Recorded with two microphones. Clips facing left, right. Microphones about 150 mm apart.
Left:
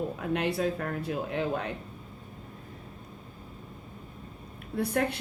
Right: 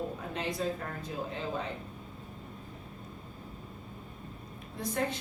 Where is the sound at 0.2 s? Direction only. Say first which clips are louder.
Left 6 dB; 65° left (ahead or behind).